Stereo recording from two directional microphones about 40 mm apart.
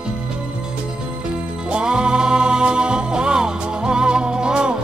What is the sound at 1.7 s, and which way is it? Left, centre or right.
Music, right.